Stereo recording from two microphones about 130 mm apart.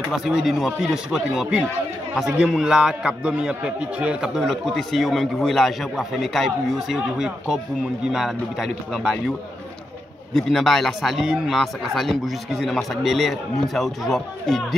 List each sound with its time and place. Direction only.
0.1 s a man's voice: 5° right (ahead or behind)
10.3 s a man's voice: centre (ahead or behind)